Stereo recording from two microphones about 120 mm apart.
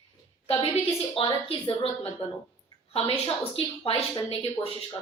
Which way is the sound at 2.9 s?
55° left (ahead or behind).